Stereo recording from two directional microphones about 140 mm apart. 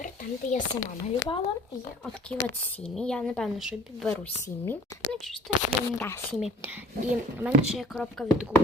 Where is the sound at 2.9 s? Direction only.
5° left (ahead or behind).